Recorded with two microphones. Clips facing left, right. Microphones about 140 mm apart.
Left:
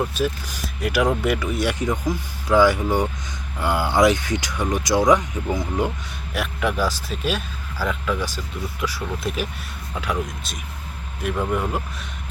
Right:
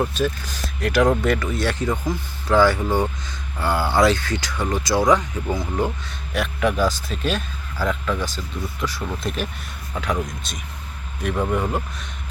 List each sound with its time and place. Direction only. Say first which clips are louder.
0.1 s speech: right 1 dB; 10° left (ahead or behind)
6.3 s speech: right 2 dB; 5° left (ahead or behind)